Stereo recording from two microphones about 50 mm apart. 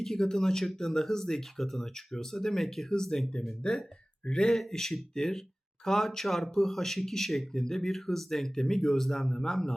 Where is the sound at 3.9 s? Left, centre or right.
Centre.